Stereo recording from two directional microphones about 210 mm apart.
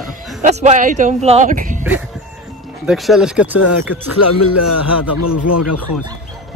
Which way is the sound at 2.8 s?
Centre (ahead or behind).